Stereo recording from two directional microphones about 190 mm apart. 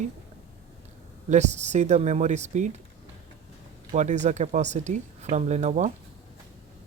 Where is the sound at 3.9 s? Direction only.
40° right (ahead or behind).